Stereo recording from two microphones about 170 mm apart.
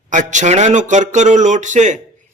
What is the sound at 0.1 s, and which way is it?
Speech, 45° right (ahead or behind).